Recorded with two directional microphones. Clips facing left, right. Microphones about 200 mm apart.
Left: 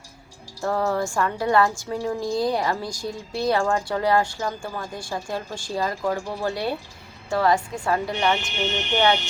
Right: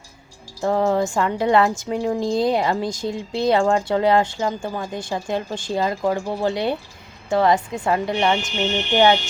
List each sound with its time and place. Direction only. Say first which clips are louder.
0.6 s a woman's voice: right 4 dB; 20° right (ahead or behind)